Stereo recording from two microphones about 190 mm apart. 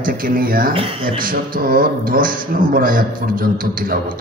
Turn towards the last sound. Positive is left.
turn(degrees=-50)  # may be behind; listen again after turning